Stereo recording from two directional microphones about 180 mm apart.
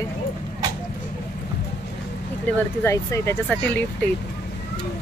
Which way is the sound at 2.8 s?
15° left (ahead or behind).